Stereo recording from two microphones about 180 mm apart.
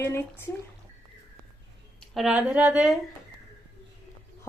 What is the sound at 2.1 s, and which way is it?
Speech, 5° right (ahead or behind).